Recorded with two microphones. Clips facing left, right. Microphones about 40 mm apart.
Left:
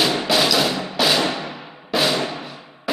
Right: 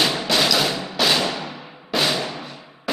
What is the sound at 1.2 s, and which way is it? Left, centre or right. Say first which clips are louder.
Music: left 2 dB; centre.